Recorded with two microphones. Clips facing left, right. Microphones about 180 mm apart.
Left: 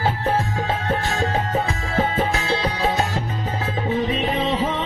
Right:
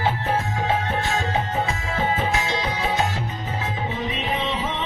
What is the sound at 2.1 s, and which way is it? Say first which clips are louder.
Music: left 2 dB; 40° left (ahead or behind).